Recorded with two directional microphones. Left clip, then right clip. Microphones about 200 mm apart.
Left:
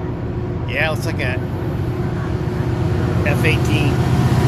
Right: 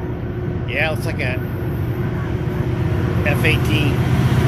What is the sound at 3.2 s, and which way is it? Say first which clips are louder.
Speech: right 1 dB; 15° right (ahead or behind).